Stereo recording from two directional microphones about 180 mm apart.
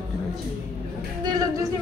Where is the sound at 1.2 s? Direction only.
20° right (ahead or behind).